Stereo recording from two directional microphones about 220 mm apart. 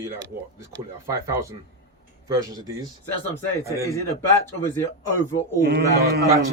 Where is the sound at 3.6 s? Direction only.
15° right (ahead or behind).